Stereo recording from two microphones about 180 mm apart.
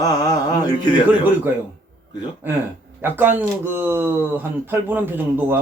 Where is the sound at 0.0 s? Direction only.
20° left (ahead or behind).